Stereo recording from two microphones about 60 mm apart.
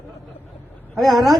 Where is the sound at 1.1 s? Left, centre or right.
Right.